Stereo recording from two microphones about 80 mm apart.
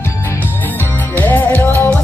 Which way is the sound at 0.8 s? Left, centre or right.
Left.